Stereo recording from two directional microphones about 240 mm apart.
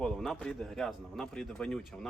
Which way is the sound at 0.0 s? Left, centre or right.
Centre.